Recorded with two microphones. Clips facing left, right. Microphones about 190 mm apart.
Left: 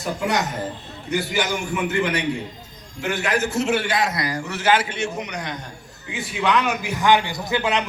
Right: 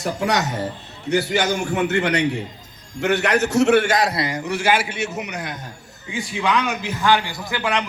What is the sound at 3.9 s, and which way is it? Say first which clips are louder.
A man's voice: right 3 dB; 35° right (ahead or behind).